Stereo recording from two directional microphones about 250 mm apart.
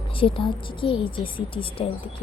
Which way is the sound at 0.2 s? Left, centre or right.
Left.